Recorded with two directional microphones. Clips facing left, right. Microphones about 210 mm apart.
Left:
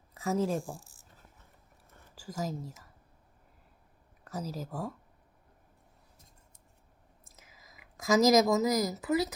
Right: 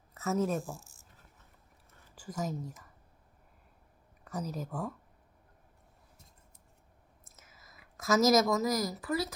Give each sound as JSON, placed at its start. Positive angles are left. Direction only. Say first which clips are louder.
{"t": 0.1, "sound": "a sound", "louder": "left 1 dB", "side_deg": 10}
{"t": 0.4, "sound": "speech", "louder": "left 1 dB", "side_deg": 15}
{"t": 2.1, "sound": "speech", "louder": "even", "side_deg": 10}
{"t": 4.2, "sound": "speech", "louder": "even", "side_deg": 5}
{"t": 7.4, "sound": "speech", "louder": "even", "side_deg": 15}